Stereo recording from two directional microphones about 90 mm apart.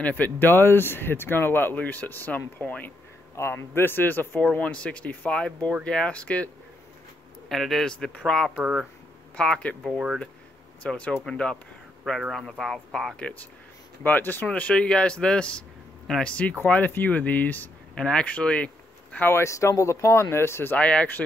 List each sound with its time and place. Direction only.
0.0 s speech: 20° left (ahead or behind)
7.4 s speech: centre (ahead or behind)
8.5 s speech: 10° right (ahead or behind)
9.4 s speech: 10° left (ahead or behind)
9.8 s speech: 5° right (ahead or behind)
10.8 s speech: 15° left (ahead or behind)
19.1 s speech: 25° left (ahead or behind)
20.7 s speech: 15° left (ahead or behind)